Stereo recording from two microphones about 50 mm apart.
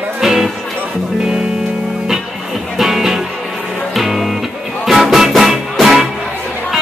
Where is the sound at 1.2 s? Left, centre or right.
Centre.